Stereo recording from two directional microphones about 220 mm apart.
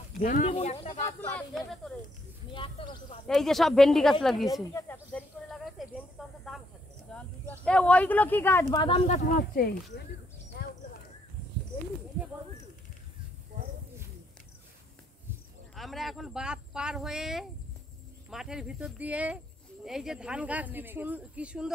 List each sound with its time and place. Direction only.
0.2 s speech: 30° left (ahead or behind)
0.7 s speech: 15° left (ahead or behind)
2.5 s speech: 20° left (ahead or behind)
3.3 s speech: centre (ahead or behind)
8.8 s speech: 30° left (ahead or behind); by 9.8 s 45° left (ahead or behind)
15.7 s speech: centre (ahead or behind)